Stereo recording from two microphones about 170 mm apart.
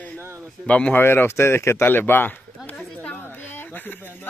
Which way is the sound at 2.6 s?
10° left (ahead or behind).